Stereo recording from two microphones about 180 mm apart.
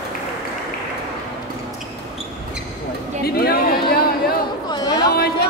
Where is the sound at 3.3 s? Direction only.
60° left (ahead or behind).